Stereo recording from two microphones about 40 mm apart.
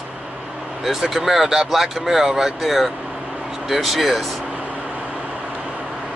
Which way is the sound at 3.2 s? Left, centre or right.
Right.